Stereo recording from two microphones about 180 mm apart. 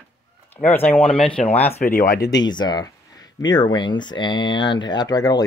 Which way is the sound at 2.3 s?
25° left (ahead or behind).